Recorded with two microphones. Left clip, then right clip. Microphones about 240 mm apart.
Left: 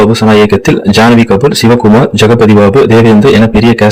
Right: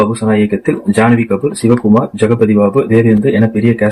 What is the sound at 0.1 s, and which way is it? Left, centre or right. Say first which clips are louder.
Speech: left 8 dB; left.